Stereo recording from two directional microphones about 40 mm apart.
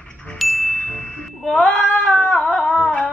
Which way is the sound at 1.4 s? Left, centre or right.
Centre.